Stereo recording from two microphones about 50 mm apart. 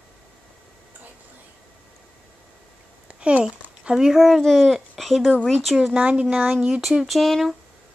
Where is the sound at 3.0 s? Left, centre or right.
Right.